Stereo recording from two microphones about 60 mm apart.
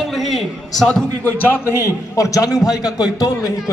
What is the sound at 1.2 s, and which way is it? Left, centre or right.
A man's voice, left.